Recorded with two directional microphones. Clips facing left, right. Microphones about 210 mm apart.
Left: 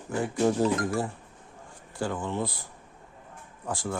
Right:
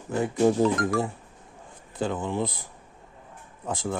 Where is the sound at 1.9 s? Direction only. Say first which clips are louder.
Right 3 dB; 20° right (ahead or behind).